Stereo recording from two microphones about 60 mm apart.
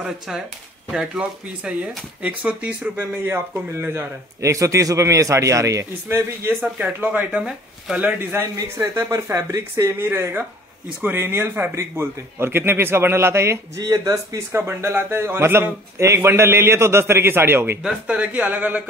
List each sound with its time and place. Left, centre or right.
0.9 s speech: centre
3.0 s speech: right
4.4 s a man's voice: right
6.0 s speech: right
6.6 s speech: right
8.0 s speech: right
8.7 s a man's voice: right
13.9 s a man's voice: right
14.5 s a man's voice: right
18.1 s speech: right